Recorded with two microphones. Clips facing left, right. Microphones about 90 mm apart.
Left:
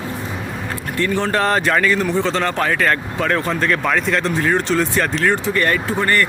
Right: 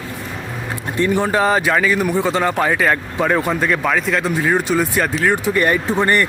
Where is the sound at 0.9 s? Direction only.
15° right (ahead or behind).